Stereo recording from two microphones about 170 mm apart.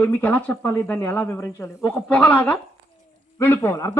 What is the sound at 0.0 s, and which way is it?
A man's voice, 10° left (ahead or behind).